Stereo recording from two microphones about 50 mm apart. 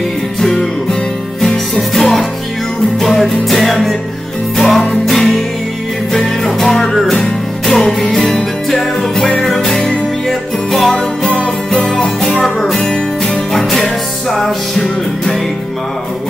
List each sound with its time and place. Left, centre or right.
1.8 s music: centre
11.0 s music: centre
11.9 s music: centre